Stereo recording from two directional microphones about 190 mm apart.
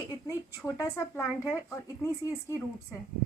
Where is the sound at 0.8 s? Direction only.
15° left (ahead or behind).